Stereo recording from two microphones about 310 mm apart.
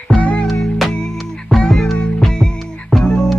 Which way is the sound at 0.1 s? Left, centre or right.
Centre.